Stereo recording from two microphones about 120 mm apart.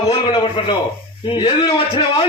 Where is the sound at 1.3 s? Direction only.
35° left (ahead or behind).